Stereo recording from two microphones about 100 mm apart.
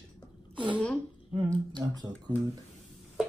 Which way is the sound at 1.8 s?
25° right (ahead or behind).